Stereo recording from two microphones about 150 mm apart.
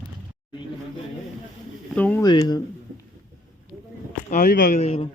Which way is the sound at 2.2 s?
25° left (ahead or behind).